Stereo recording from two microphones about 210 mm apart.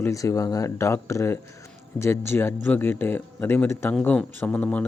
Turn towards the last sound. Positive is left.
turn(degrees=5)  # may be behind; listen again after turning